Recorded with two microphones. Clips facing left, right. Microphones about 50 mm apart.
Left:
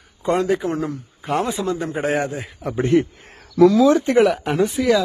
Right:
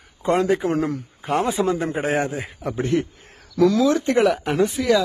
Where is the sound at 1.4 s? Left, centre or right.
Right.